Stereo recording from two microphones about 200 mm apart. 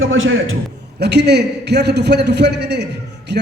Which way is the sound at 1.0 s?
55° right (ahead or behind).